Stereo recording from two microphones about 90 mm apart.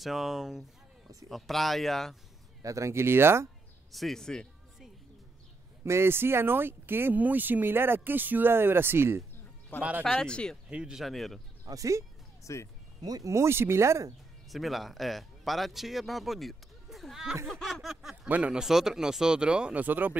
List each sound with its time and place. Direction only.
0.0 s speech: centre (ahead or behind)
2.6 s speech: 35° right (ahead or behind)
3.9 s music: 5° left (ahead or behind)
5.9 s speech: 30° right (ahead or behind)
9.8 s speech: 15° right (ahead or behind)
10.0 s speech: 10° left (ahead or behind)
10.7 s speech: 10° right (ahead or behind)
11.6 s speech: 40° right (ahead or behind)
12.5 s speech: 35° left (ahead or behind)
13.0 s speech: 40° right (ahead or behind)
14.5 s speech: centre (ahead or behind); by 20.2 s 20° right (ahead or behind)